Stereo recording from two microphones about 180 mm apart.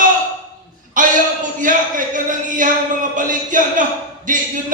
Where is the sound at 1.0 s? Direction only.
45° right (ahead or behind).